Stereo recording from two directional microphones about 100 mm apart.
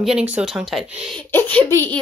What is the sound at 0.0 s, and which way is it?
Speech, 10° right (ahead or behind).